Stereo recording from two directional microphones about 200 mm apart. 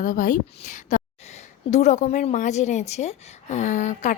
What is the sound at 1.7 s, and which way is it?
A woman's voice, 35° left (ahead or behind).